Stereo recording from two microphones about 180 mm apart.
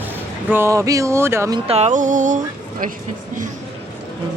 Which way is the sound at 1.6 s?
35° right (ahead or behind).